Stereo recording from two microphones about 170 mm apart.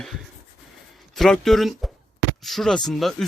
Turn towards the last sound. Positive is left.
turn(degrees=0)  # may be behind; listen again after turning